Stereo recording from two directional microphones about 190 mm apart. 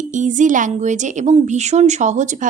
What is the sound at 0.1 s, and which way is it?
Speech, 40° right (ahead or behind).